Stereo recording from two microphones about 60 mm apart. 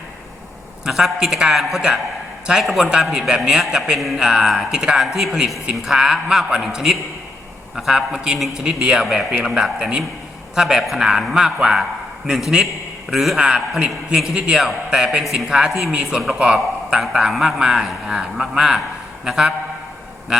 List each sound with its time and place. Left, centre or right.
0.9 s a man's voice: centre
15.2 s a man's voice: centre